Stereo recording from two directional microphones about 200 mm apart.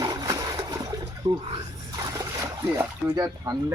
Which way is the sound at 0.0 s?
20° right (ahead or behind).